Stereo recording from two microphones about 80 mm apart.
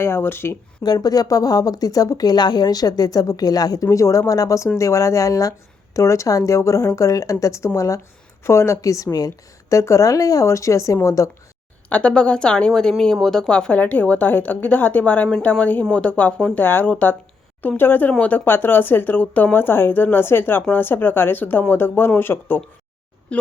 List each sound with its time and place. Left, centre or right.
0.0 s a woman's voice: left
0.9 s speech: left
3.8 s speech: left
11.9 s a woman's voice: centre